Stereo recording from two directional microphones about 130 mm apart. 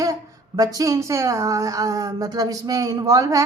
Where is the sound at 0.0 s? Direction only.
25° right (ahead or behind).